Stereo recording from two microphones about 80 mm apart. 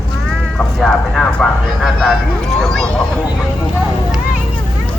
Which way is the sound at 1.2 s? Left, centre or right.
Centre.